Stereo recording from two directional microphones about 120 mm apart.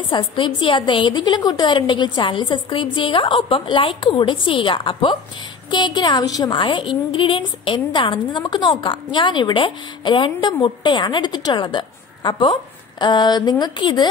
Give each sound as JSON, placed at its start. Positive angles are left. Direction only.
{"t": 0.1, "sound": "a woman's voice", "side_deg": 40}